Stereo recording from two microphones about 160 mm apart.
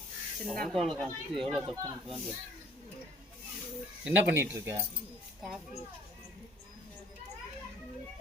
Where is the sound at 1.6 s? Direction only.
30° right (ahead or behind).